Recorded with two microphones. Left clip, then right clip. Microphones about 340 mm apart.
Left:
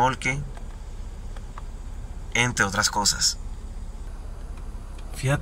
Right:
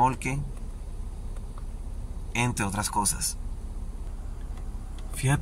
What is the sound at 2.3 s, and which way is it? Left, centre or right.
Speech, centre.